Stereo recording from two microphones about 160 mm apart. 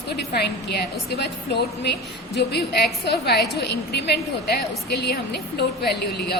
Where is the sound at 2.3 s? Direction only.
90° left.